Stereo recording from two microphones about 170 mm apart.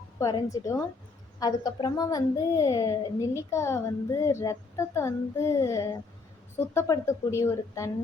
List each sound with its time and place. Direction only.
0.2 s a child's voice: 20° left (ahead or behind)